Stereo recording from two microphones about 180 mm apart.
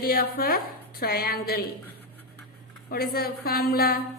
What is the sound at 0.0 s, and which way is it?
A woman's voice, 55° left (ahead or behind).